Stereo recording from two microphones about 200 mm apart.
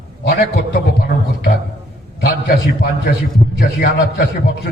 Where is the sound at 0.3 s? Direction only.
50° left (ahead or behind).